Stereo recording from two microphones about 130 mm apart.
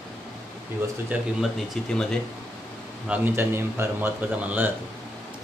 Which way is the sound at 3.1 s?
15° right (ahead or behind).